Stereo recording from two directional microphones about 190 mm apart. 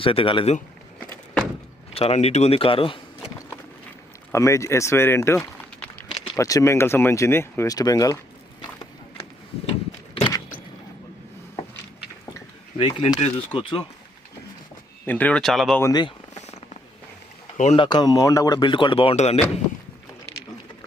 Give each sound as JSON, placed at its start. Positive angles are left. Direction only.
{"t": 0.0, "sound": "speech", "side_deg": 30}
{"t": 1.9, "sound": "speech", "side_deg": 30}
{"t": 4.3, "sound": "speech", "side_deg": 15}
{"t": 5.4, "sound": "a sound", "side_deg": 5}
{"t": 6.2, "sound": "speech", "side_deg": 15}
{"t": 10.2, "sound": "a sound", "side_deg": 25}
{"t": 12.7, "sound": "speech", "side_deg": 30}
{"t": 15.0, "sound": "speech", "side_deg": 10}
{"t": 15.8, "sound": "speech", "side_deg": 20}
{"t": 16.3, "sound": "purr", "side_deg": 35}
{"t": 17.6, "sound": "speech", "side_deg": 35}
{"t": 17.8, "sound": "speech", "side_deg": 20}